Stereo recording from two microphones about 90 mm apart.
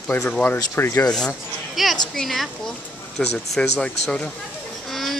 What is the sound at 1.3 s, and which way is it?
A woman's voice, centre (ahead or behind).